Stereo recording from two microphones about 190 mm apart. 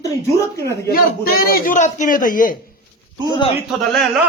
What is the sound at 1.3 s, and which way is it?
A man's voice, 50° left (ahead or behind).